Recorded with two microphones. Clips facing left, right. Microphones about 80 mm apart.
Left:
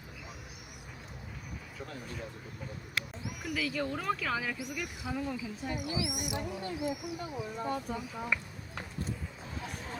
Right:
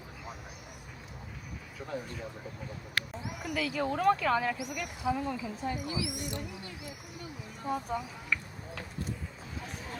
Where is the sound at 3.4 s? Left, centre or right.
Centre.